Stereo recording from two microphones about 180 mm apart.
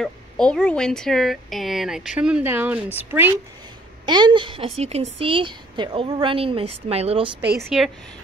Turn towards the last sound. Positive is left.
turn(degrees=-5)  # may be behind; listen again after turning